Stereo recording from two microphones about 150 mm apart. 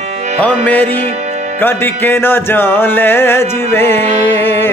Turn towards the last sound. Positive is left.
turn(degrees=15)  # may be behind; listen again after turning